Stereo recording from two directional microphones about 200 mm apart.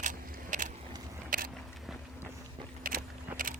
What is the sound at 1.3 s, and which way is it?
Biting, 45° right (ahead or behind).